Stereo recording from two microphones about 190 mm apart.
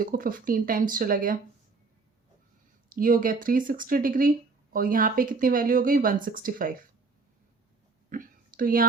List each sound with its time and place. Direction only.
0.0 s speech: 50° right (ahead or behind)
2.9 s speech: 45° right (ahead or behind)
8.1 s a sound: 45° right (ahead or behind)